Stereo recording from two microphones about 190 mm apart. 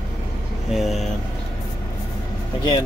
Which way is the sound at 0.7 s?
Centre (ahead or behind).